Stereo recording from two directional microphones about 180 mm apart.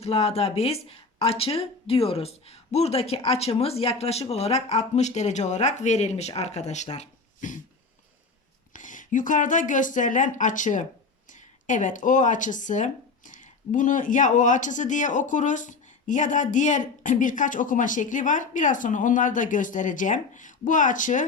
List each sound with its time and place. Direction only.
0.0 s speech: 35° left (ahead or behind)
8.7 s a woman's voice: 45° left (ahead or behind)